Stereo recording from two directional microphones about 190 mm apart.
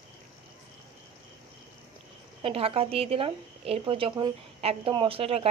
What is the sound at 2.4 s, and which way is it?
Speech, 30° right (ahead or behind).